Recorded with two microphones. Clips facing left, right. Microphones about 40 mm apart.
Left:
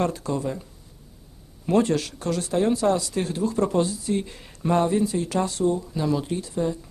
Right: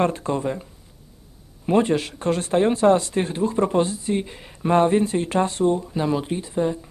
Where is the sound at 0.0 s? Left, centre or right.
Right.